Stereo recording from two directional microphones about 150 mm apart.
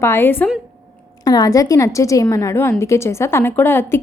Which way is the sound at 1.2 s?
25° left (ahead or behind).